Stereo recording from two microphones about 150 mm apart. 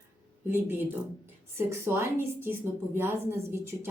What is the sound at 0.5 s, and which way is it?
A woman's voice, 15° right (ahead or behind).